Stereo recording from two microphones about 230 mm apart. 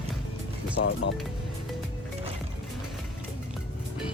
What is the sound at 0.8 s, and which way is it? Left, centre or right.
Speech, left.